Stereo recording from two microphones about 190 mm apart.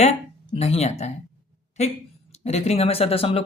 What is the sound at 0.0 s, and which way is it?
Speech, 35° left (ahead or behind).